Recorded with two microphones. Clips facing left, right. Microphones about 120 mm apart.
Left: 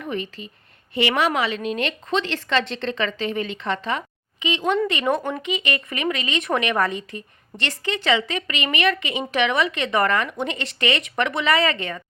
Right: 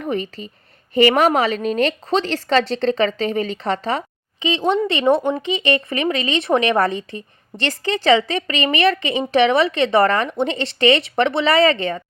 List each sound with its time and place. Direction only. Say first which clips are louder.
0.0 s a woman's voice: right 5 dB; 35° right (ahead or behind)